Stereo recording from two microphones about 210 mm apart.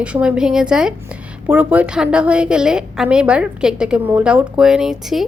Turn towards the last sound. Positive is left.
turn(degrees=0)  # may be behind; listen again after turning